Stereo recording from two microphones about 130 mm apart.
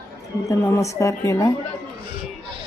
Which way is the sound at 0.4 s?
20° left (ahead or behind).